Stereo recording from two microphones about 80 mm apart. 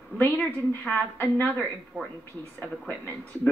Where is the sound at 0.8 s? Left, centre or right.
Left.